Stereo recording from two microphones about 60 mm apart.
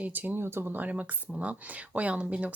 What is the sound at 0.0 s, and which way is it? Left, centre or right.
Speech, right.